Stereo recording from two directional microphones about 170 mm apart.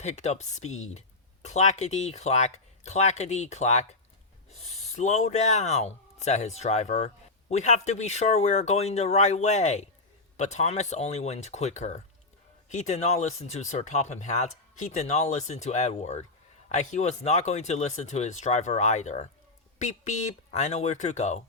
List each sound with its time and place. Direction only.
0.0 s speech: 40° left (ahead or behind)